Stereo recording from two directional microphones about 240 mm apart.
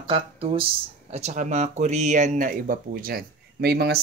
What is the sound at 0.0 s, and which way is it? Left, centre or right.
Speech, right.